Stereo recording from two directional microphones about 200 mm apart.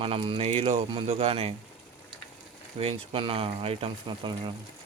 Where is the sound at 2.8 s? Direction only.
30° right (ahead or behind).